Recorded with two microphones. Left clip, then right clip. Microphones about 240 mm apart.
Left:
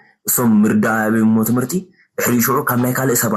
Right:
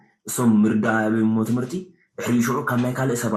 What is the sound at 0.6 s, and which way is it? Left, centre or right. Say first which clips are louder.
A man's voice: left 4 dB; left.